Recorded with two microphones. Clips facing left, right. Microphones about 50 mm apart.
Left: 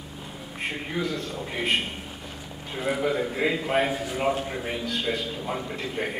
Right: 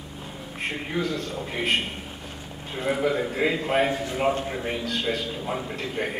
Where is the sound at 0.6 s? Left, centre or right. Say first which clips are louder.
Right 1 dB; centre.